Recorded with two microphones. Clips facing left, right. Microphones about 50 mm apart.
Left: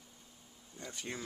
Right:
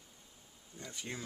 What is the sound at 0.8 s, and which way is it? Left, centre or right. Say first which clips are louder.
Speech: left 1 dB; centre.